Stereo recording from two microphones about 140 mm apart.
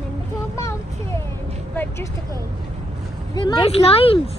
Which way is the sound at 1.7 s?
15° left (ahead or behind).